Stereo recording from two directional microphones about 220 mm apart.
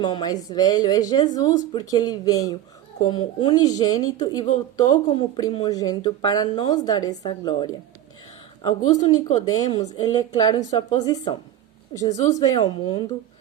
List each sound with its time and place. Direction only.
0.0 s speech: 20° left (ahead or behind)
9.6 s a woman's voice: 30° left (ahead or behind)
10.0 s a woman's voice: 20° left (ahead or behind)